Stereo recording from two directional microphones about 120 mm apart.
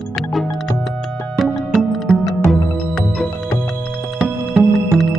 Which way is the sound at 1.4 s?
Centre (ahead or behind).